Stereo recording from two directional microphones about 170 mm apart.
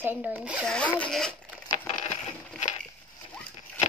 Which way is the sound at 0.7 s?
5° left (ahead or behind).